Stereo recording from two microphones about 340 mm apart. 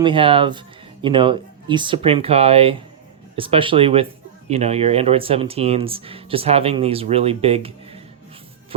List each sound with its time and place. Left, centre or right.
0.0 s speech: centre